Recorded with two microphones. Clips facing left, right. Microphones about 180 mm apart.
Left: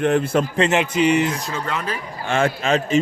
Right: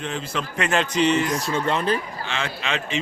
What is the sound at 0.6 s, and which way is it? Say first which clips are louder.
Speech: left 1 dB; 20° left (ahead or behind).